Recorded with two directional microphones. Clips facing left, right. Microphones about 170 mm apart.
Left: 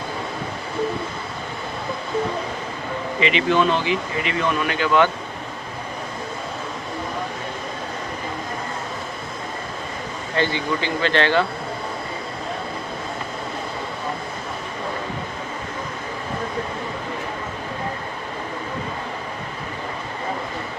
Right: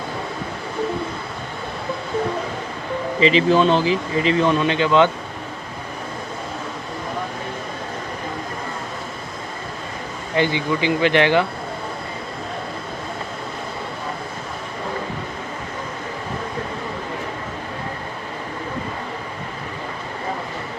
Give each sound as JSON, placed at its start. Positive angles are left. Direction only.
{"t": 3.2, "sound": "speech", "side_deg": -35}
{"t": 10.3, "sound": "speech", "side_deg": -15}